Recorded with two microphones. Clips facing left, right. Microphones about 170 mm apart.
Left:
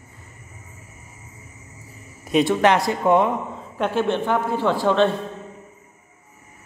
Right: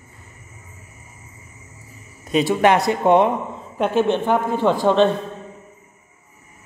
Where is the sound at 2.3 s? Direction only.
Centre (ahead or behind).